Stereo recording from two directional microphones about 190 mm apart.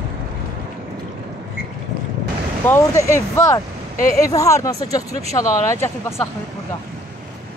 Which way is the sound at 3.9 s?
45° left (ahead or behind).